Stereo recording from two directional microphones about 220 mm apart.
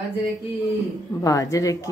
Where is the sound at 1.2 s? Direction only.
15° left (ahead or behind).